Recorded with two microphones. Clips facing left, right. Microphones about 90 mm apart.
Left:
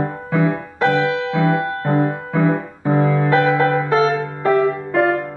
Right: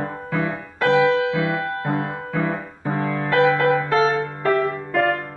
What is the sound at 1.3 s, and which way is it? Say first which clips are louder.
Music: left 5 dB; 30° left (ahead or behind).